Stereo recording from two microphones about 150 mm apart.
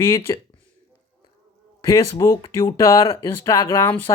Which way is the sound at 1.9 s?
20° left (ahead or behind).